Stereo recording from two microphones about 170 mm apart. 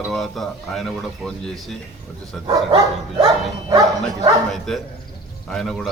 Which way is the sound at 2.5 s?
20° right (ahead or behind).